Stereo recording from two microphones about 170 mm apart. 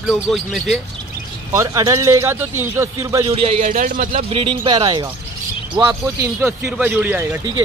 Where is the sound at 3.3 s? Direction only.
35° right (ahead or behind).